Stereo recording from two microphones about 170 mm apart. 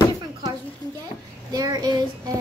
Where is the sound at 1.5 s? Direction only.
20° right (ahead or behind).